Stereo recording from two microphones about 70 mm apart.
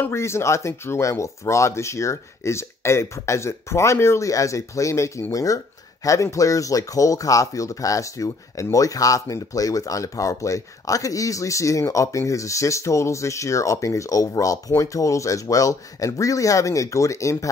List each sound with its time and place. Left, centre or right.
0.1 s speech: left